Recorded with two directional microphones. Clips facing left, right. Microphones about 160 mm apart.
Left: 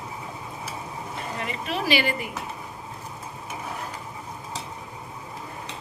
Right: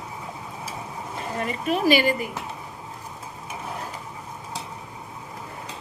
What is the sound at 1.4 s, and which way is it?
Speech, 45° right (ahead or behind).